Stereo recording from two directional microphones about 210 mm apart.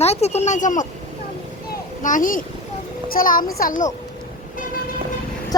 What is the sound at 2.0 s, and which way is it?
Speech, 40° left (ahead or behind).